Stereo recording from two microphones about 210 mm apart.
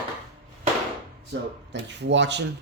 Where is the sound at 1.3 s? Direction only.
55° right (ahead or behind).